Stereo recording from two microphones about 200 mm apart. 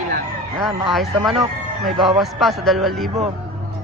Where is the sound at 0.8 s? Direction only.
Centre (ahead or behind).